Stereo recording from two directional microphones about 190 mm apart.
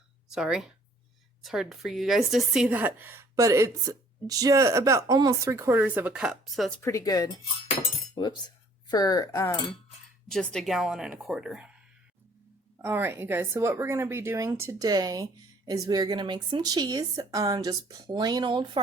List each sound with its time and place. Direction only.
0.3 s a woman's voice: 5° right (ahead or behind)
6.8 s speech: 20° left (ahead or behind)
10.2 s speech: centre (ahead or behind)
12.8 s a woman's voice: 10° right (ahead or behind)